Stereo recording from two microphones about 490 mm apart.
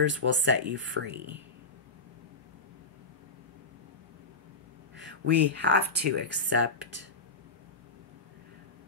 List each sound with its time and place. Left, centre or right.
0.0 s speech: right
4.9 s speech: right